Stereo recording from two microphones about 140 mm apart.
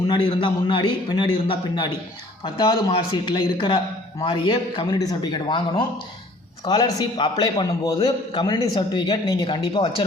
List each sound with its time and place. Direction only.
0.1 s speech: 35° left (ahead or behind)